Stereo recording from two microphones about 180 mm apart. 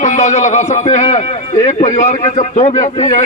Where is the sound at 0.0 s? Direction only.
40° left (ahead or behind).